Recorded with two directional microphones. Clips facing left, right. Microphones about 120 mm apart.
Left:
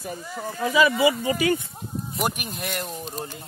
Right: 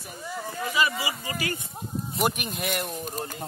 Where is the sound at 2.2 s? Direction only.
Centre (ahead or behind).